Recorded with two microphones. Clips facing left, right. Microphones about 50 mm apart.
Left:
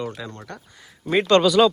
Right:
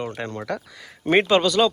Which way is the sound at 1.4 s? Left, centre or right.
Centre.